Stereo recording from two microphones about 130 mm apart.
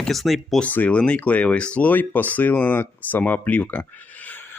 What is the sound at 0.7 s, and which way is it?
Speech, 10° left (ahead or behind).